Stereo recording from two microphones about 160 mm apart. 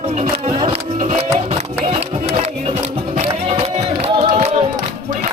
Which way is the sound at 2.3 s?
50° right (ahead or behind).